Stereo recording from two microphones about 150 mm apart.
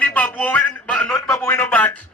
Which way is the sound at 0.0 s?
10° left (ahead or behind).